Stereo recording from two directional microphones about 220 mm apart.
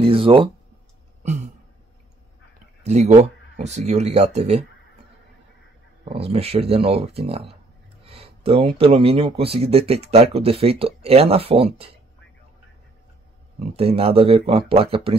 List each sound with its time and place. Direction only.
0.0 s a sound: 25° right (ahead or behind)
2.8 s speech: 30° right (ahead or behind)
6.0 s speech: 25° right (ahead or behind)
13.6 s speech: 25° right (ahead or behind)